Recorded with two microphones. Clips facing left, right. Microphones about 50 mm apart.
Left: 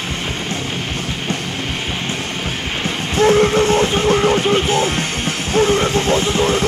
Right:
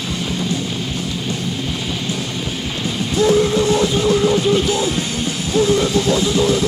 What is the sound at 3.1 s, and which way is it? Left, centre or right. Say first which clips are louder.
Music: left 2 dB; left.